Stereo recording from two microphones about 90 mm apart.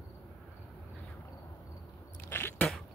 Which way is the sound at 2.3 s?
25° left (ahead or behind).